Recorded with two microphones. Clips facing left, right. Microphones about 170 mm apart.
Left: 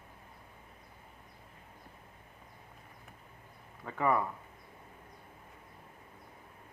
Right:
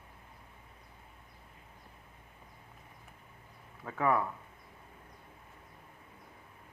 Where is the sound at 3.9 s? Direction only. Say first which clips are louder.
Even; centre (ahead or behind).